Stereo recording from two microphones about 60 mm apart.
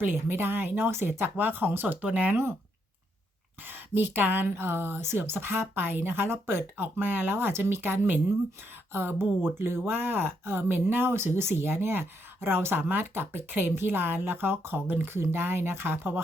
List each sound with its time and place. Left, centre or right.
0.0 s speech: right
2.0 s speech: right
3.7 s speech: right